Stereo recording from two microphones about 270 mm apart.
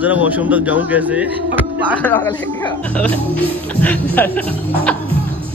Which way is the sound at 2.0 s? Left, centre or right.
Centre.